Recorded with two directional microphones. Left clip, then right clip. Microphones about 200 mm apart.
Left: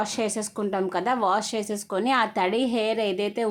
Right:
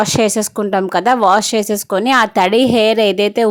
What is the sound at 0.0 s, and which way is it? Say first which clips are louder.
A woman's voice: right 13 dB; 40° right (ahead or behind).